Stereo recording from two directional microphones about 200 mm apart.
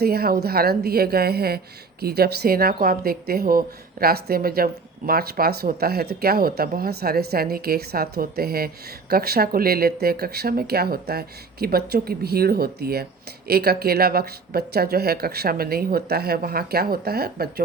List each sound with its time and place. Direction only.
0.0 s speech: 50° right (ahead or behind)